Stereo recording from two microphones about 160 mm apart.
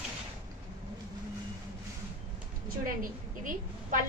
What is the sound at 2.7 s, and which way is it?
A woman's voice, 60° right (ahead or behind).